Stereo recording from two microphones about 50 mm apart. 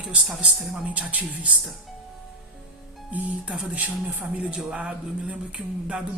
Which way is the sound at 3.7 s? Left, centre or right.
Right.